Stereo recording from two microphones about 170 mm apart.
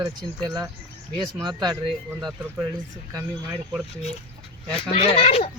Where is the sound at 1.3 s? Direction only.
25° right (ahead or behind).